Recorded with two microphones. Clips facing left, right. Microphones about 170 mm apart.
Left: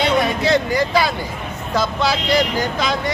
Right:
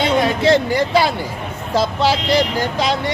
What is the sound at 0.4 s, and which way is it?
Speech, 30° right (ahead or behind).